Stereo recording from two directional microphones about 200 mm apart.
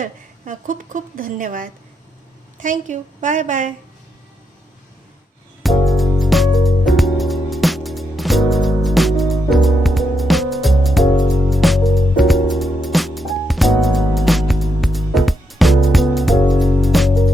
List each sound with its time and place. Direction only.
0.0 s a woman's voice: 40° right (ahead or behind)
5.6 s music: centre (ahead or behind)